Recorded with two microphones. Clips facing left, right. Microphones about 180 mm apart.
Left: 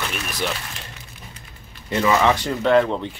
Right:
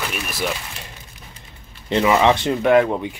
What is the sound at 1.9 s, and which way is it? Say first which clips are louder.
Speech: right 2 dB; 20° right (ahead or behind).